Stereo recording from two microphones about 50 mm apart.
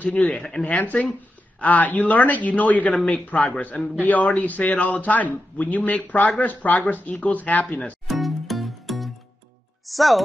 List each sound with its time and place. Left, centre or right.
0.2 s speech: centre
0.7 s a man's voice: left
8.1 s music: centre
9.8 s speech: centre